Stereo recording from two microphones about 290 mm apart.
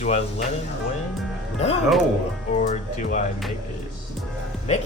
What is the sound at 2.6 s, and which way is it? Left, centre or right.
Speech, left.